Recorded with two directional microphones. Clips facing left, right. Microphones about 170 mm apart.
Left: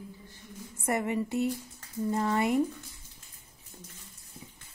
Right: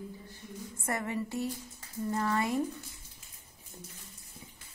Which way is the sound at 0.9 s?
20° left (ahead or behind).